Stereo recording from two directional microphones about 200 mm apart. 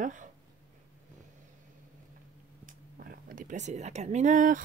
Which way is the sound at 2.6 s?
45° right (ahead or behind).